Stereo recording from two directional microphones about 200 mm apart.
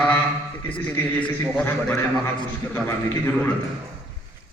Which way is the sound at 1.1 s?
5° left (ahead or behind).